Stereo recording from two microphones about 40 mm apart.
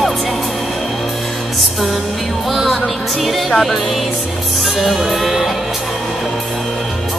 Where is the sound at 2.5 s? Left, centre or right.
Centre.